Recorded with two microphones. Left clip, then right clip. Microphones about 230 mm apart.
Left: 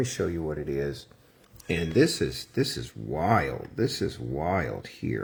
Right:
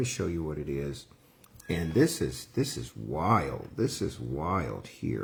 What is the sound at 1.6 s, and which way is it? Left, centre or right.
Speech, centre.